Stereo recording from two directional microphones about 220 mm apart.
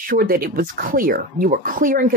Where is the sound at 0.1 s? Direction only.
40° right (ahead or behind).